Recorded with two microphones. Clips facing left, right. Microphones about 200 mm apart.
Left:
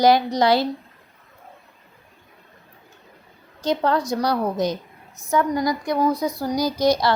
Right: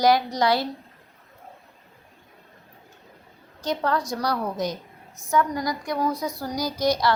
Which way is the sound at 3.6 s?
25° left (ahead or behind).